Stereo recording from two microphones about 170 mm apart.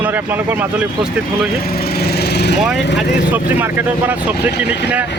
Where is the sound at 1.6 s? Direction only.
65° left (ahead or behind).